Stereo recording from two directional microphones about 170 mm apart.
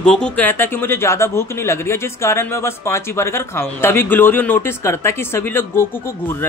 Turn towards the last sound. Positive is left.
turn(degrees=15)  # may be behind; listen again after turning